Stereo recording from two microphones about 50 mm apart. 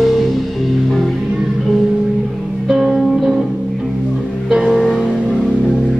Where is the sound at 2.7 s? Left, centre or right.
Centre.